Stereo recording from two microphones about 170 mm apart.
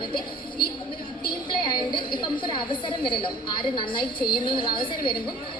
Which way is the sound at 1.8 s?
25° left (ahead or behind).